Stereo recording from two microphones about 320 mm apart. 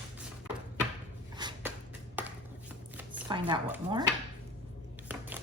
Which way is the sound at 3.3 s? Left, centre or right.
Centre.